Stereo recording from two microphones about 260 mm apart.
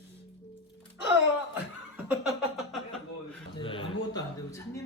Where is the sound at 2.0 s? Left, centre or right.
Centre.